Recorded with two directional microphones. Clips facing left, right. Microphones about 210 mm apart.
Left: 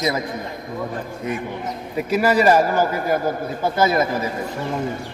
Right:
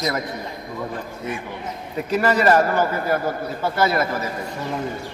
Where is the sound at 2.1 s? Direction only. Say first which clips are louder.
Left 1 dB; 10° left (ahead or behind).